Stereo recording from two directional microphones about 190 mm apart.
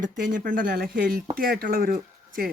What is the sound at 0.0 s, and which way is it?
Speech, 45° right (ahead or behind).